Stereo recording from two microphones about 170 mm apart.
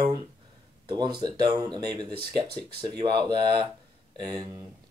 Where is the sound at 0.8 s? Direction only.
25° right (ahead or behind).